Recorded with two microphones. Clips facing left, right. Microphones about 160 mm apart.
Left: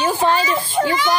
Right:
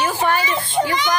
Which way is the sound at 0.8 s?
15° right (ahead or behind).